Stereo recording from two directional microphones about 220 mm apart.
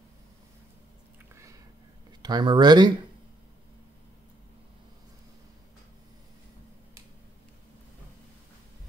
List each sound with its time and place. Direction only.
2.2 s speech: 20° right (ahead or behind)